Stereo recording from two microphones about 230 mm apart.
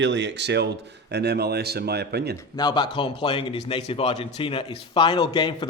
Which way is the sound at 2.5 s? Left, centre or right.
Centre.